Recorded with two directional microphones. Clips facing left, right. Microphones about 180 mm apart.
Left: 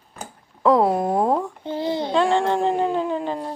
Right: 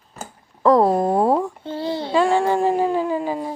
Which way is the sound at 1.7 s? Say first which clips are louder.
Left 1 dB; 15° left (ahead or behind).